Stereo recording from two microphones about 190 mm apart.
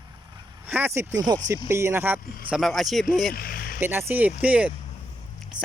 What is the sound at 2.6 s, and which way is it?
Speech, centre (ahead or behind).